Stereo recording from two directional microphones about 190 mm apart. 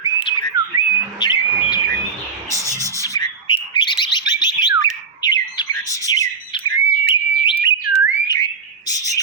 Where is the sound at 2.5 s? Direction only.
15° right (ahead or behind).